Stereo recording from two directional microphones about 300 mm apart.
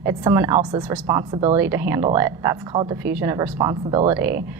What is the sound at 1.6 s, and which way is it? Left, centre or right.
A woman's voice, centre.